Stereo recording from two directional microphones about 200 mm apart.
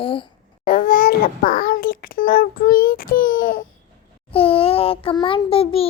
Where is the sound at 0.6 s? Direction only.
45° left (ahead or behind).